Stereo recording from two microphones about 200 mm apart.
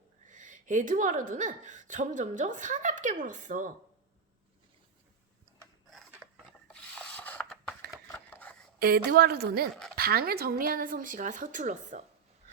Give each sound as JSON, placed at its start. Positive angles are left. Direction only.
{"t": 0.3, "sound": "a woman's voice", "side_deg": -40}
{"t": 5.9, "sound": "a sound", "side_deg": 0}
{"t": 8.1, "sound": "scissors", "side_deg": 10}
{"t": 8.8, "sound": "a woman's voice", "side_deg": -50}